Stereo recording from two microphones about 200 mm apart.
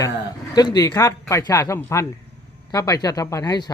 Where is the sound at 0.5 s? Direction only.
20° left (ahead or behind).